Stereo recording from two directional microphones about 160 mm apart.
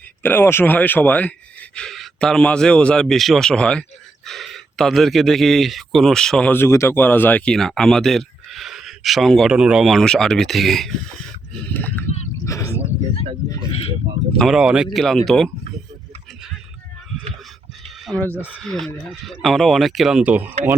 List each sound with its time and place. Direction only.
0.2 s speech: 15° left (ahead or behind)
14.3 s speech: centre (ahead or behind)
17.8 s a sound: centre (ahead or behind)
18.3 s speech: 5° right (ahead or behind)